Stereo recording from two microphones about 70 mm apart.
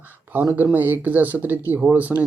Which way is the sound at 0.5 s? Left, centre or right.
Right.